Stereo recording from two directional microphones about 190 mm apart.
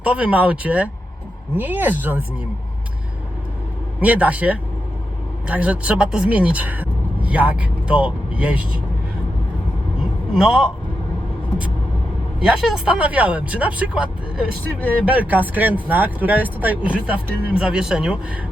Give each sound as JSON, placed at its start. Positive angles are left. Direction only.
{"t": 0.0, "sound": "speech", "side_deg": -5}
{"t": 4.0, "sound": "speech", "side_deg": -5}
{"t": 10.3, "sound": "speech", "side_deg": 0}
{"t": 12.4, "sound": "speech", "side_deg": -5}